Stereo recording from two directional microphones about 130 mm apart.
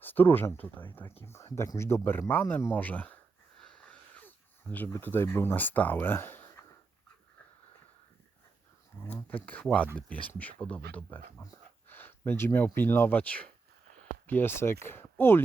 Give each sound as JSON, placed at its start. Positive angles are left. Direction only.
{"t": 0.0, "sound": "speech", "side_deg": 15}
{"t": 3.6, "sound": "a sound", "side_deg": 10}
{"t": 9.0, "sound": "speech", "side_deg": 15}